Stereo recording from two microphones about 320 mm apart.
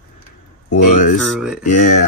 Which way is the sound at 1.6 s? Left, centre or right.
Left.